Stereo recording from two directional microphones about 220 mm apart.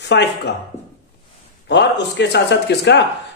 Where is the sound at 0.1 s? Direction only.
50° left (ahead or behind).